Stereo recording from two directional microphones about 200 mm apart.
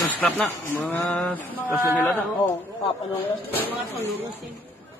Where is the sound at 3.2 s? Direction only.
10° left (ahead or behind).